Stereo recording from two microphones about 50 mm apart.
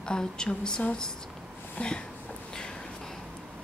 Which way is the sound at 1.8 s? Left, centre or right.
Left.